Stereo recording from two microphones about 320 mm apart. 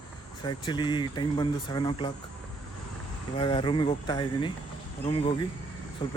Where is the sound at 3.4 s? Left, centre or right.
Centre.